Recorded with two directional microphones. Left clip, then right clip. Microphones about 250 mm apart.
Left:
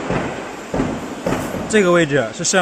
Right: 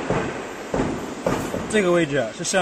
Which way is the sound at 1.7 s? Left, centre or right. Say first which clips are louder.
Left 6 dB; left.